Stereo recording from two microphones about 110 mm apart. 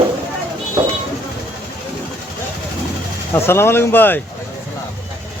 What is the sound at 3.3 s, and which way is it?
Speech, 20° left (ahead or behind).